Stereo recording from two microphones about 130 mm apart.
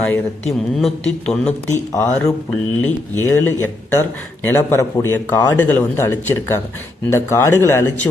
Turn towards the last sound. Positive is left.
turn(degrees=20)  # may be behind; listen again after turning